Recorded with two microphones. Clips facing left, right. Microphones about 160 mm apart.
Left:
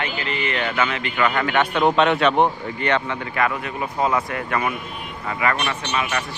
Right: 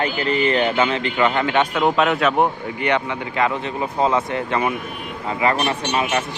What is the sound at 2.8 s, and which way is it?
A man's voice, 15° right (ahead or behind).